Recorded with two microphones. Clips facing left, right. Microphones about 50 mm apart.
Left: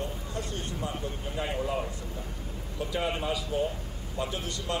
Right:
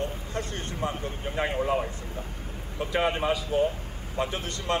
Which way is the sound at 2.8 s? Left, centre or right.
Right.